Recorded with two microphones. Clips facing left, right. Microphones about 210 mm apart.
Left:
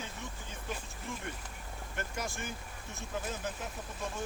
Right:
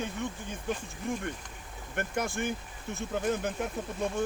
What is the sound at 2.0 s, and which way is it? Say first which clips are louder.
Speech: right 8 dB; 60° right (ahead or behind).